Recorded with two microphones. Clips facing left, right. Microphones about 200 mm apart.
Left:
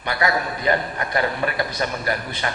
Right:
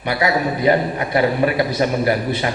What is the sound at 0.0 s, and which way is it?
A man's voice, 10° right (ahead or behind).